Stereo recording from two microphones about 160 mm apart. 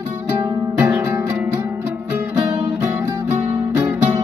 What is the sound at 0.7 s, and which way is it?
Music, 15° right (ahead or behind).